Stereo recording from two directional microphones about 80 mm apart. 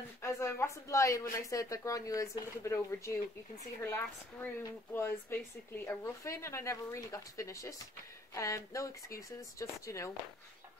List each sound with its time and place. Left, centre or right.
0.2 s speech: left
2.7 s a woman's voice: left